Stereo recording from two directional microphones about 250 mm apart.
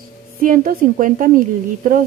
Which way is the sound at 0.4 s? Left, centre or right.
Right.